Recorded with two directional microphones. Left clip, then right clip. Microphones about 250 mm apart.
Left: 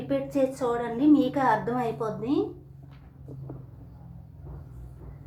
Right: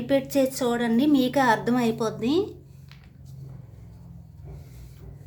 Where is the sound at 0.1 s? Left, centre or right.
Right.